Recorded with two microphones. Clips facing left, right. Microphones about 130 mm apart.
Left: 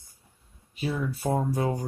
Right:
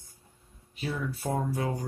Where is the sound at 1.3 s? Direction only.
25° left (ahead or behind).